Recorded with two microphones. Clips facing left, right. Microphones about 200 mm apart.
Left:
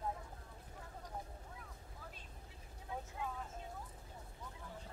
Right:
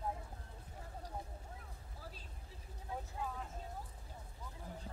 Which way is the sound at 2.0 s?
35° right (ahead or behind).